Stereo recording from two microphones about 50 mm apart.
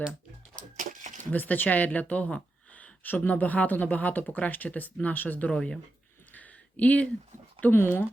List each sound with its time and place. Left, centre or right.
1.2 s speech: left
6.3 s a sound: left
7.7 s speech: left